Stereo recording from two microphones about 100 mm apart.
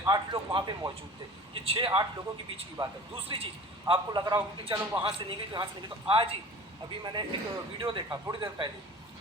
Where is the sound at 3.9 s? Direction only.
45° right (ahead or behind).